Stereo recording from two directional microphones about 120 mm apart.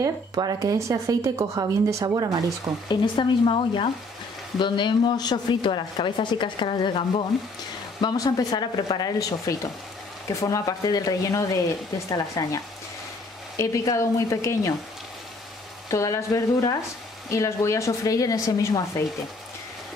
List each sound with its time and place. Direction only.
0.0 s a woman's voice: 35° right (ahead or behind)
2.9 s a woman's voice: 45° left (ahead or behind); by 12.5 s 25° left (ahead or behind)
13.6 s a woman's voice: 25° left (ahead or behind)
15.9 s a woman's voice: 25° left (ahead or behind)